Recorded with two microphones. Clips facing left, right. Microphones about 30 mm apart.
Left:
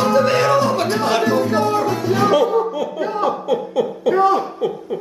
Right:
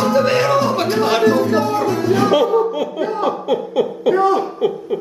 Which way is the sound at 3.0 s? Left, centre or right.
Centre.